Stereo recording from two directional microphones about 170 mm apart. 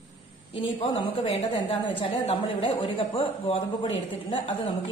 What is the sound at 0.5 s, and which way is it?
A woman's voice, 30° left (ahead or behind).